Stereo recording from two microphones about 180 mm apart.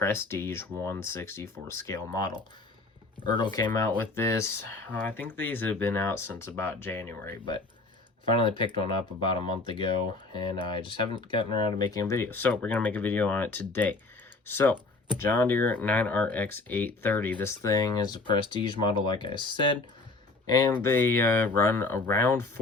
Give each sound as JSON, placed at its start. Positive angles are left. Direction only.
{"t": 0.0, "sound": "speech", "side_deg": 15}
{"t": 3.7, "sound": "speech", "side_deg": 15}
{"t": 8.3, "sound": "speech", "side_deg": 30}